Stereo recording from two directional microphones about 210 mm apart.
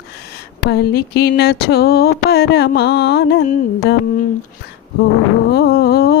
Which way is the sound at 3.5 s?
45° left (ahead or behind).